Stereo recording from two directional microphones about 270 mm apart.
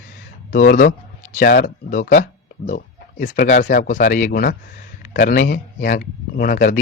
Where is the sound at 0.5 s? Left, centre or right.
Left.